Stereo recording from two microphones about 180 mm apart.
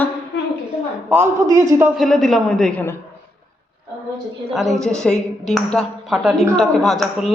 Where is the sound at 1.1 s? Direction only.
15° right (ahead or behind).